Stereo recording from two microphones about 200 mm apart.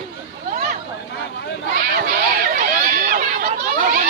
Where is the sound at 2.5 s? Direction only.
45° right (ahead or behind).